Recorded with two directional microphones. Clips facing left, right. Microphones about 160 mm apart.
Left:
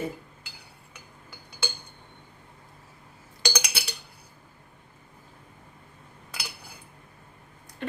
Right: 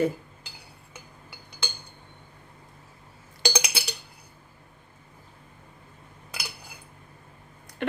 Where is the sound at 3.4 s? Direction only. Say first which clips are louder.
Right 3 dB; 20° right (ahead or behind).